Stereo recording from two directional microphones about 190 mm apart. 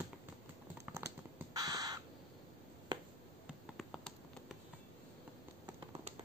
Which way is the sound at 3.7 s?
Centre (ahead or behind).